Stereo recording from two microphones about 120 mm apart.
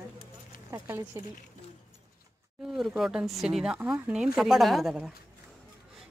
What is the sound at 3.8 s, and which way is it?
Speech, 15° right (ahead or behind).